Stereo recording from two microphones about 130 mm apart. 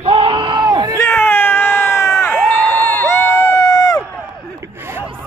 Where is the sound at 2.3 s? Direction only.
5° left (ahead or behind).